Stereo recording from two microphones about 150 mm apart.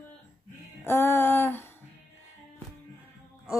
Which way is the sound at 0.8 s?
15° left (ahead or behind).